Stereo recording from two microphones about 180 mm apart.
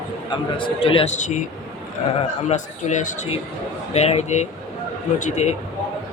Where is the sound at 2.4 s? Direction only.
40° left (ahead or behind).